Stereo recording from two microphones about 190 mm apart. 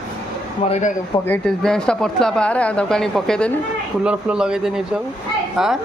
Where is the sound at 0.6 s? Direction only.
35° left (ahead or behind).